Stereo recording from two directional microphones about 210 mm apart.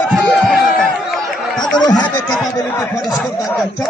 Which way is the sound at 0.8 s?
5° left (ahead or behind).